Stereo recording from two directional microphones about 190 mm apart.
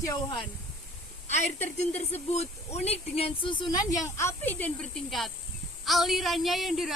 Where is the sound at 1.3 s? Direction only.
35° left (ahead or behind).